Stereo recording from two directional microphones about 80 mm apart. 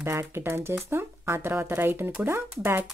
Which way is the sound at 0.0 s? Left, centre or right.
Right.